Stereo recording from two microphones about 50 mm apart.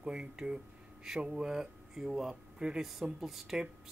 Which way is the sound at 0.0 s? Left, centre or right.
Centre.